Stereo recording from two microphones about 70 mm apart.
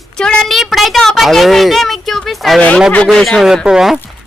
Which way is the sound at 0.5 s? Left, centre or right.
Centre.